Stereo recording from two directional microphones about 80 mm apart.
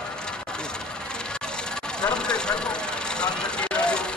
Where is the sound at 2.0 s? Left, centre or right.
Centre.